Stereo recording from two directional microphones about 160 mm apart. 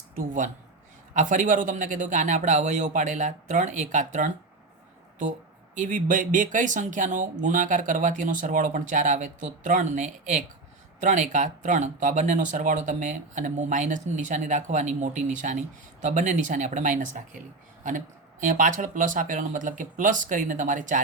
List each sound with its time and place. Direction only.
0.2 s speech: 55° right (ahead or behind)
5.7 s speech: 55° right (ahead or behind)